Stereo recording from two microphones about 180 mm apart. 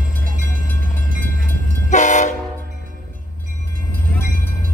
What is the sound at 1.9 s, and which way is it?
Train, 40° left (ahead or behind).